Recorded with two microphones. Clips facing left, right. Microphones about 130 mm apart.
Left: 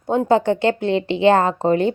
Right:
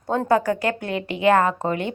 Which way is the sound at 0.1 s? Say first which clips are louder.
Left 3 dB; 20° left (ahead or behind).